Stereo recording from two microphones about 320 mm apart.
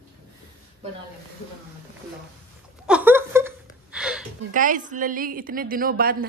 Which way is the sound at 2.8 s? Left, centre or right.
Centre.